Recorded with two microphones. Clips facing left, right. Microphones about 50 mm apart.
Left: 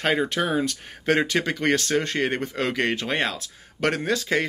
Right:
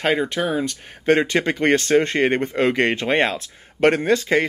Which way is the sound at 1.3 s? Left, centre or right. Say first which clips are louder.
Right 4 dB; right.